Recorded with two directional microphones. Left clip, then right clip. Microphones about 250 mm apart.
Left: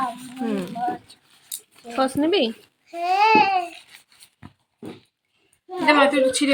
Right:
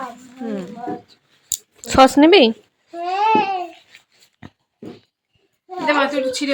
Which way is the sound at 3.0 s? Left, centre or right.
Left.